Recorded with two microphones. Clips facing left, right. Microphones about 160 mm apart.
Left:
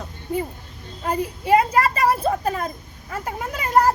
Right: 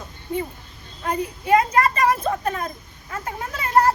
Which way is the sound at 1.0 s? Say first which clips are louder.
Left 1 dB; 10° left (ahead or behind).